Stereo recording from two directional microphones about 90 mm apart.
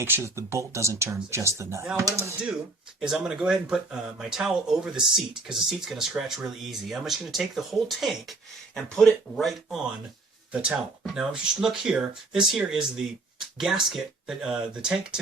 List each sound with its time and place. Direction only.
0.0 s speech: 30° right (ahead or behind)
3.0 s speech: 5° right (ahead or behind)
10.5 s speech: 10° right (ahead or behind)